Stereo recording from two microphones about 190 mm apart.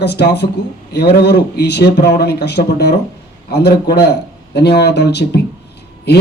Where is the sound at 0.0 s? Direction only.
60° left (ahead or behind).